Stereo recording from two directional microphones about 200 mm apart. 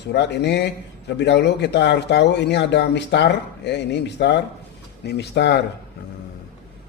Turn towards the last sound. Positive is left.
turn(degrees=60)  # may be behind; listen again after turning